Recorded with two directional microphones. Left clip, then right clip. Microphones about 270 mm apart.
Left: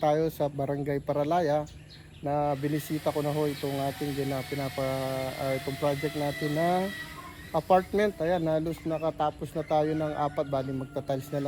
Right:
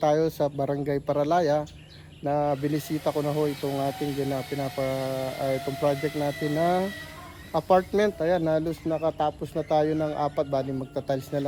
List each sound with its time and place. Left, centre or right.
0.0 s a man's voice: centre
3.9 s speech: right
4.5 s a man's voice: centre
5.5 s speech: right
6.6 s a man's voice: centre